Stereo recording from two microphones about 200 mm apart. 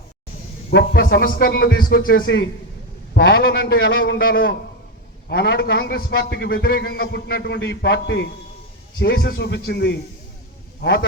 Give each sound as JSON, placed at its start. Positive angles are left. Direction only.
{"t": 0.7, "sound": "a man's voice", "side_deg": 55}
{"t": 9.0, "sound": "a man's voice", "side_deg": 50}